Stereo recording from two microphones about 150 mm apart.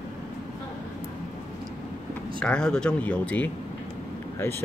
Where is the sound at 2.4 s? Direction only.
5° left (ahead or behind).